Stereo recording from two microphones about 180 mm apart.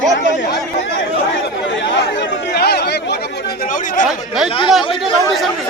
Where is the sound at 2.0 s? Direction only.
75° left (ahead or behind); by 4.0 s 45° left (ahead or behind).